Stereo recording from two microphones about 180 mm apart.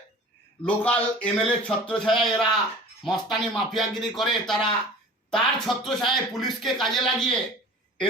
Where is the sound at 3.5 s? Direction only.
Centre (ahead or behind).